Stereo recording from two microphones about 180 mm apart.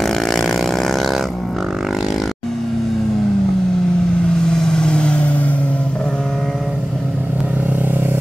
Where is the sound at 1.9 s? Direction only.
Centre (ahead or behind).